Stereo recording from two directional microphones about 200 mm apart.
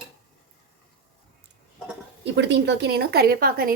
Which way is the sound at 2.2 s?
60° right (ahead or behind).